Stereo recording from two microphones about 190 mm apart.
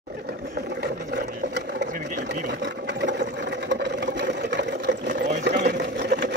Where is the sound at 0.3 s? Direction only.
60° right (ahead or behind).